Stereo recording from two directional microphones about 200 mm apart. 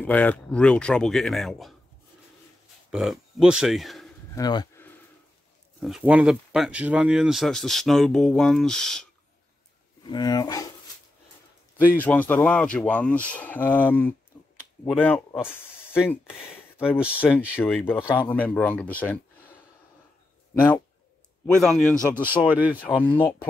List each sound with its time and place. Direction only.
0.0 s speech: 5° left (ahead or behind)
2.9 s speech: centre (ahead or behind)
4.4 s speech: 20° left (ahead or behind)
5.8 s speech: centre (ahead or behind)
10.0 s speech: 20° left (ahead or behind)
12.0 s speech: 10° left (ahead or behind)
21.5 s speech: centre (ahead or behind)
21.9 s speech: 10° right (ahead or behind)
22.8 s speech: 25° left (ahead or behind)